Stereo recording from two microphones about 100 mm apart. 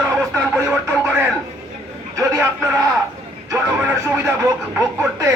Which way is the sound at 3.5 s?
25° right (ahead or behind).